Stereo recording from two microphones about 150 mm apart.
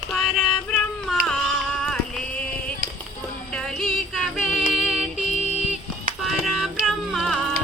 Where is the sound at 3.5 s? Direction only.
5° left (ahead or behind).